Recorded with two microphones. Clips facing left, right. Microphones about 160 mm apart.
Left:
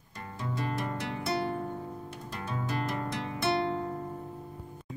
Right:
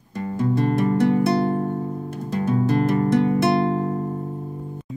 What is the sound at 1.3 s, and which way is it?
Music, 35° right (ahead or behind).